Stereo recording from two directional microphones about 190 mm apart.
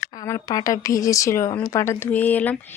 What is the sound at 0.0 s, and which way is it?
Speech, 20° left (ahead or behind).